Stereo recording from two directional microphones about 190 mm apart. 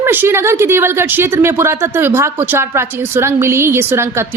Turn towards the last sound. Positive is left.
turn(degrees=-15)  # may be behind; listen again after turning